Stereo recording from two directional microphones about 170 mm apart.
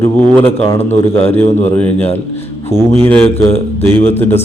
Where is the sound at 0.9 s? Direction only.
40° left (ahead or behind).